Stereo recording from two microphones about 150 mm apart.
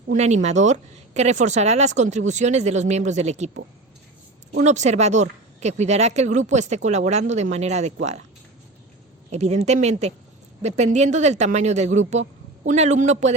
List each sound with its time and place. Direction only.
0.1 s speech: 50° right (ahead or behind)
9.3 s speech: 45° right (ahead or behind)